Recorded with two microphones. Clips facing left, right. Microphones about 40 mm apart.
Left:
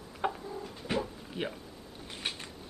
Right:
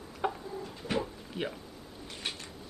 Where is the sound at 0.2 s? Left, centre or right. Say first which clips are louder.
Even; centre.